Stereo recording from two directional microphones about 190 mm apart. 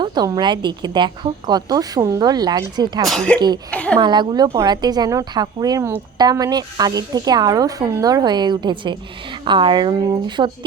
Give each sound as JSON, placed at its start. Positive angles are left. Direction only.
{"t": 0.0, "sound": "a woman's voice", "side_deg": -20}
{"t": 3.1, "sound": "a woman's voice", "side_deg": 5}
{"t": 3.9, "sound": "a woman's voice", "side_deg": -25}